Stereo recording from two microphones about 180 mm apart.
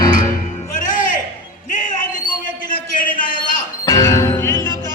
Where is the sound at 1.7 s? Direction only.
45° left (ahead or behind).